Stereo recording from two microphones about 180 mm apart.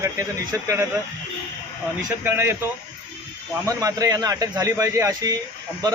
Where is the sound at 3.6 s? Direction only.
20° right (ahead or behind).